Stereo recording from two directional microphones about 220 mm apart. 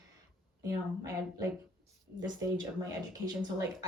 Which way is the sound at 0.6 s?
15° right (ahead or behind).